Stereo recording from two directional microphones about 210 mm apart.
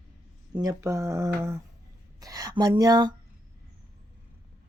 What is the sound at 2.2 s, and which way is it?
Speech, 15° right (ahead or behind).